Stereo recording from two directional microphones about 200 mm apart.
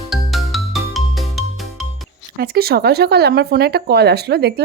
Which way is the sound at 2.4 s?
50° right (ahead or behind).